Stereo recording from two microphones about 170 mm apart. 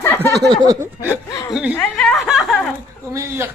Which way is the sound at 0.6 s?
20° right (ahead or behind).